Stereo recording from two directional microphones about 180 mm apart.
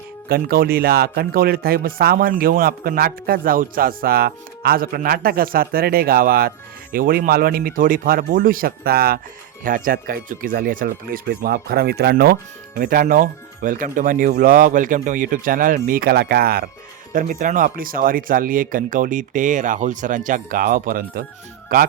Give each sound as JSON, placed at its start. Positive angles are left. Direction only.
{"t": 0.3, "sound": "speech", "side_deg": -55}